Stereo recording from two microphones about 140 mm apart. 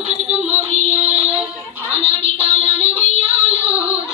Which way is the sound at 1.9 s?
45° right (ahead or behind).